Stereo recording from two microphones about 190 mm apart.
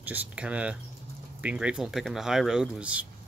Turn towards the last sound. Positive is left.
turn(degrees=-5)  # may be behind; listen again after turning